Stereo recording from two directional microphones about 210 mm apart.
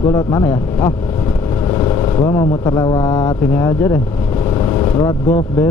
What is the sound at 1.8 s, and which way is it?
Speech, 15° left (ahead or behind).